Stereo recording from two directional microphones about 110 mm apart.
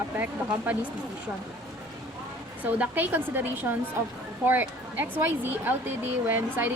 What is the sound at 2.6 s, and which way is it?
Speech, 15° right (ahead or behind).